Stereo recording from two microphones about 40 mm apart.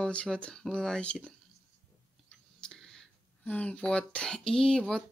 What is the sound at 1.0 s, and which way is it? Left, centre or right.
Speech, left.